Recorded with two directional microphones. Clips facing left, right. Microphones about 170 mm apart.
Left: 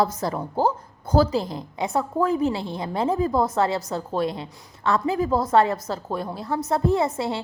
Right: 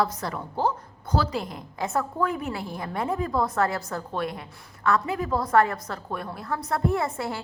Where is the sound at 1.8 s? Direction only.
15° left (ahead or behind).